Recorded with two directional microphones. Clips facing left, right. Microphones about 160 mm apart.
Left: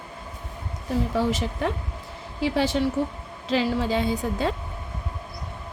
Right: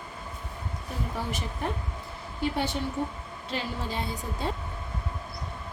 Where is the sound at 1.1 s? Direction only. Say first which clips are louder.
Left 9 dB; 90° left.